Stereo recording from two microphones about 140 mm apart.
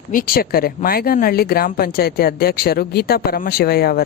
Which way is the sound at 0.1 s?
85° left.